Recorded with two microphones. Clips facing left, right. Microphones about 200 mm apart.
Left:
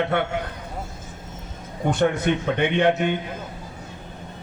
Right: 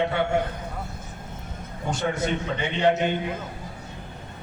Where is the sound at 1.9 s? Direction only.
60° left (ahead or behind).